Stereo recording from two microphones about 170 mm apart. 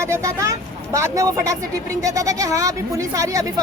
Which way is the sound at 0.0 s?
15° right (ahead or behind).